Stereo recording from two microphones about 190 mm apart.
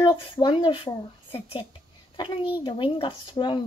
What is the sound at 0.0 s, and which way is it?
A woman's voice, 25° left (ahead or behind).